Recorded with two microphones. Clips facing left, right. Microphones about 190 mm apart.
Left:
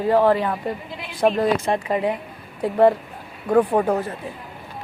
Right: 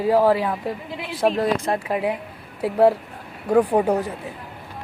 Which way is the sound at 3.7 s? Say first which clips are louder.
Right 1 dB; 15° right (ahead or behind).